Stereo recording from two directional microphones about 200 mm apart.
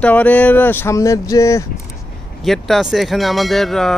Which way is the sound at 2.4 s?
Centre (ahead or behind).